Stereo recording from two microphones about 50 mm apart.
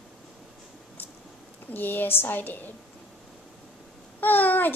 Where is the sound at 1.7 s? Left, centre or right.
Left.